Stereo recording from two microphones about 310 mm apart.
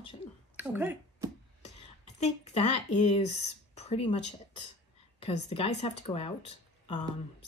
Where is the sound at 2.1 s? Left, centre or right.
Left.